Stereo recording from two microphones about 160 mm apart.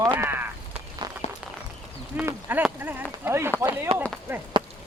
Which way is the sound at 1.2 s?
40° left (ahead or behind).